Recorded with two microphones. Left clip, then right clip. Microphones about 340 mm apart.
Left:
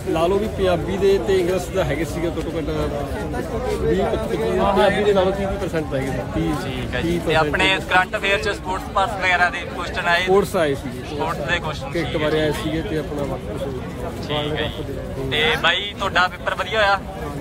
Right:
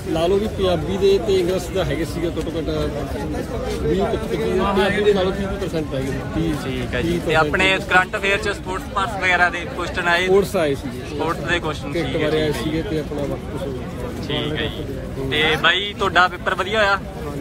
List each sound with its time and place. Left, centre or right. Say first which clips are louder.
0.1 s speech: even; centre
4.5 s speech: left 2 dB; left
5.1 s speech: left 2 dB; centre
7.0 s speech: right 1 dB; centre
14.3 s speech: left 1 dB; centre